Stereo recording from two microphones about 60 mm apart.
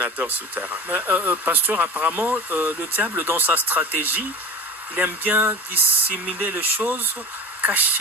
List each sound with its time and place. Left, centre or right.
0.0 s speech: right